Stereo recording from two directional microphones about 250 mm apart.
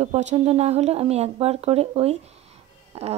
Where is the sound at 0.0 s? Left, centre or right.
Right.